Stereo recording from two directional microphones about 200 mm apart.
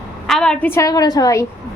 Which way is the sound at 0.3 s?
5° left (ahead or behind).